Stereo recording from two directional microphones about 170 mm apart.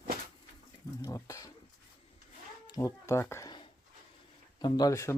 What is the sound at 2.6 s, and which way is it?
Speech, 20° left (ahead or behind).